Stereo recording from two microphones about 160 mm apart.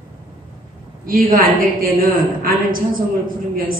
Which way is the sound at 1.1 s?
60° right (ahead or behind).